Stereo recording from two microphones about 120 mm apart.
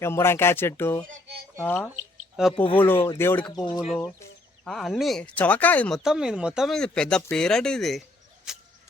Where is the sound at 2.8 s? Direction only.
15° left (ahead or behind).